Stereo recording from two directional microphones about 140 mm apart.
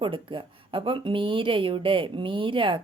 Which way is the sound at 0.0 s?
40° right (ahead or behind).